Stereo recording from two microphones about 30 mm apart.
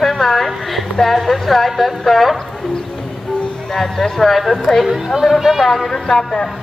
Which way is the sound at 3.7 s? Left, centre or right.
Centre.